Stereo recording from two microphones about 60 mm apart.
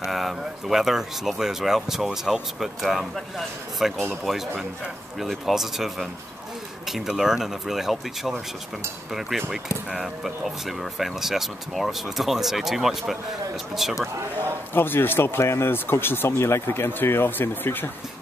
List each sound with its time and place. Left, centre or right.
0.0 s speech: centre
9.5 s speech: centre
14.7 s speech: left